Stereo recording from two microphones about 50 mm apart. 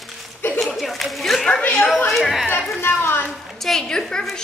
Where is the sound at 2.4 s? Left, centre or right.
Left.